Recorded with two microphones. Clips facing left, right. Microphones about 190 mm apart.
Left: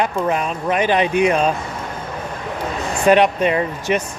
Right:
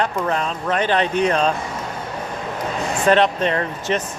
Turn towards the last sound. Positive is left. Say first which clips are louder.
# left 3 dB
turn(degrees=10)  # may be behind; listen again after turning